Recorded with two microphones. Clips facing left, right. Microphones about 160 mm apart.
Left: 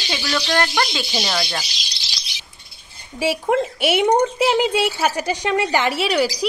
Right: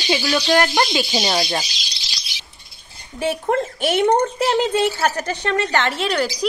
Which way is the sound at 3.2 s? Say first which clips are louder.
Left 1 dB; 10° left (ahead or behind).